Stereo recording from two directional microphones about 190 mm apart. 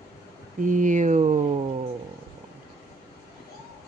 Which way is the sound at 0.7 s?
40° right (ahead or behind).